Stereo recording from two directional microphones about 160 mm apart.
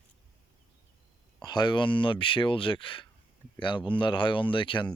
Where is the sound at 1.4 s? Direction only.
25° left (ahead or behind).